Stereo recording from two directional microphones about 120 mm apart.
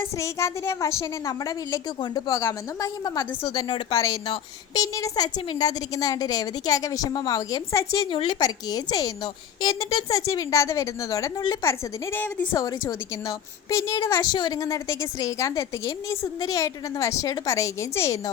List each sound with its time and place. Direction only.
0.0 s a woman's voice: 20° left (ahead or behind)
8.1 s a woman's voice: 40° left (ahead or behind)
11.7 s a woman's voice: 15° left (ahead or behind)
12.5 s a woman's voice: 25° left (ahead or behind)